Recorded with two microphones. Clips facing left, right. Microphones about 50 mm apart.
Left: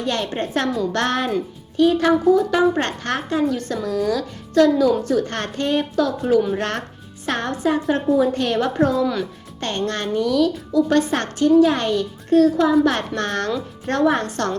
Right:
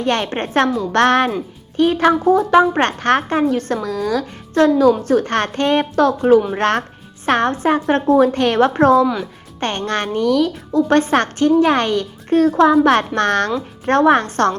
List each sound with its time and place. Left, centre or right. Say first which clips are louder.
0.0 s a woman's voice: right 4 dB; right
3.8 s a woman's voice: right 1 dB; right
9.6 s a woman's voice: right 3 dB; right